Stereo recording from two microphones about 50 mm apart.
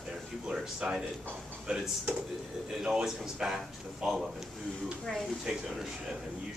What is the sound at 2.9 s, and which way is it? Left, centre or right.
Speech, centre.